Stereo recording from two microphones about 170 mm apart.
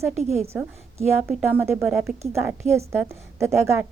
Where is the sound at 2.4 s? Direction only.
15° right (ahead or behind).